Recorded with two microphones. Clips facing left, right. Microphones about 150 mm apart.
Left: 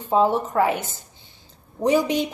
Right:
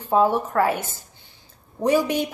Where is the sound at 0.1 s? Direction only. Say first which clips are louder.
Even; 20° left (ahead or behind).